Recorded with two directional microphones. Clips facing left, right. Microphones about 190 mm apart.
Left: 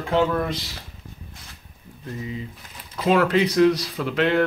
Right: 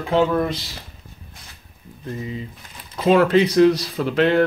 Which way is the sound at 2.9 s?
25° right (ahead or behind).